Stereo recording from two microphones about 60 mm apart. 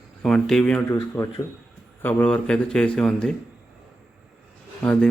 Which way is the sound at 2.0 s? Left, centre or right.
Left.